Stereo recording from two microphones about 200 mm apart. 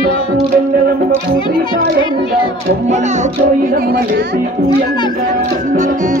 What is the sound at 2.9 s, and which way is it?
Music, 35° right (ahead or behind).